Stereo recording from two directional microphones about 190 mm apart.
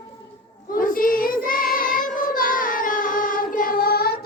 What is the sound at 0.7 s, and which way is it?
Child singing, 50° left (ahead or behind).